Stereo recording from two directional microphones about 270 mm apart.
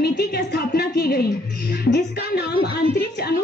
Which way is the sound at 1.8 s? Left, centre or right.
Left.